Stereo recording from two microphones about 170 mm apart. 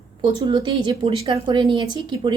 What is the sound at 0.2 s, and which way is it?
A woman's voice, 25° right (ahead or behind).